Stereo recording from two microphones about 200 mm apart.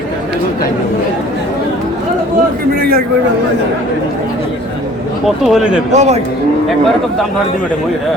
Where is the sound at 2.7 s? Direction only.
50° right (ahead or behind).